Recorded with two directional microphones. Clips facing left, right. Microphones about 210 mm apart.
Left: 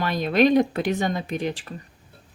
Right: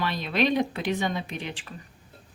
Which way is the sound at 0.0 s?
45° left (ahead or behind).